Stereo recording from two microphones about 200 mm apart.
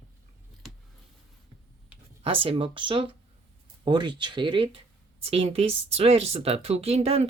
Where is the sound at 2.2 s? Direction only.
25° right (ahead or behind).